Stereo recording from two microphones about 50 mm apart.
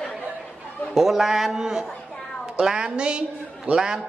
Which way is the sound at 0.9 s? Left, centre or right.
Centre.